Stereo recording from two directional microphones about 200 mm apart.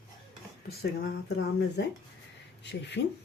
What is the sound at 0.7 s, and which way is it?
Speech, 50° left (ahead or behind).